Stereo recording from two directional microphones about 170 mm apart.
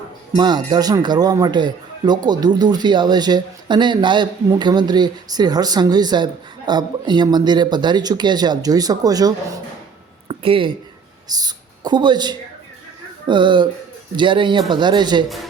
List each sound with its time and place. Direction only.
0.3 s speech: 25° right (ahead or behind)
10.2 s a sound: 30° right (ahead or behind)
11.3 s speech: 25° right (ahead or behind)